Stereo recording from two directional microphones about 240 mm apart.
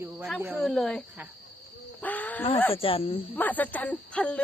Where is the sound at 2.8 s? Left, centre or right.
Left.